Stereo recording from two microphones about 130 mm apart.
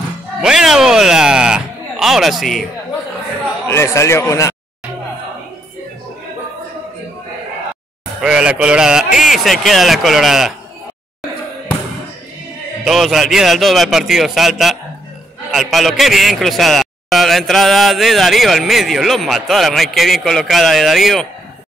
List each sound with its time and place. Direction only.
0.4 s a sound: 5° right (ahead or behind)
3.6 s speech: 20° left (ahead or behind)
8.2 s a man's voice: 5° right (ahead or behind)
12.8 s a man's voice: centre (ahead or behind)